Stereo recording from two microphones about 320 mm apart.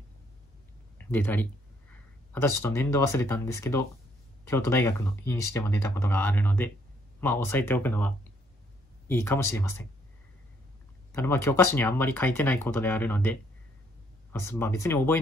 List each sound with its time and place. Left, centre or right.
0.9 s speech: centre
11.1 s speech: centre